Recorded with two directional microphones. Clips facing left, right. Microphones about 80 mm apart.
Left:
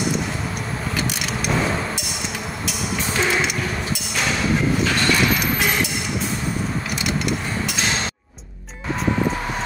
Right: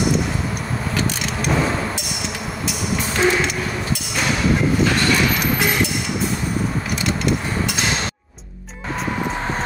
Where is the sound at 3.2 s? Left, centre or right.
Centre.